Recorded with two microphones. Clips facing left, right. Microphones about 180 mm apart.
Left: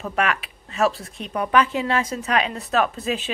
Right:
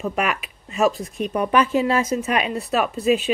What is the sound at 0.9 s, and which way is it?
Speech, 45° right (ahead or behind).